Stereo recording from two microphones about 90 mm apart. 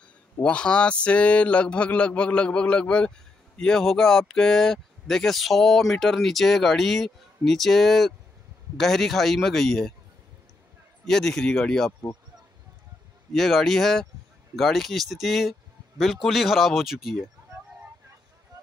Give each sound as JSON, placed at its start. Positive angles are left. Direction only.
{"t": 0.4, "sound": "speech", "side_deg": 10}
{"t": 11.1, "sound": "speech", "side_deg": 5}
{"t": 13.3, "sound": "speech", "side_deg": 5}